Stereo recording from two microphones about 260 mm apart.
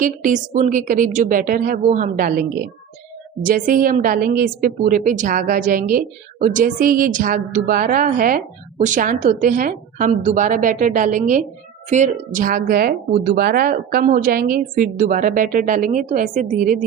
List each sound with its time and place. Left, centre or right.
0.0 s a woman's voice: right